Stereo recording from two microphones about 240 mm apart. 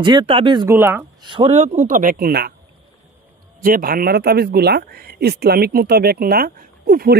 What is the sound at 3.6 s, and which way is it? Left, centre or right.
Speech, right.